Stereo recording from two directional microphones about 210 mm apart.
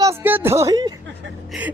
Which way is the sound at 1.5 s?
5° right (ahead or behind).